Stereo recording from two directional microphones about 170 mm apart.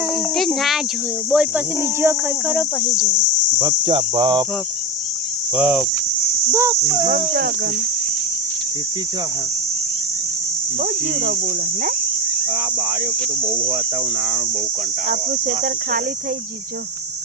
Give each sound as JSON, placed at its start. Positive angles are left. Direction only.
{"t": 0.3, "sound": "a sound", "side_deg": 0}
{"t": 1.3, "sound": "speech", "side_deg": -5}
{"t": 2.8, "sound": "cricket", "side_deg": 20}
{"t": 3.6, "sound": "cricket", "side_deg": -30}
{"t": 5.5, "sound": "cricket", "side_deg": -5}
{"t": 15.1, "sound": "speech", "side_deg": -50}